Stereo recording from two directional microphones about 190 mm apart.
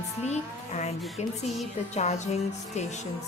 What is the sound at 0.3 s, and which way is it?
Speech, 35° left (ahead or behind).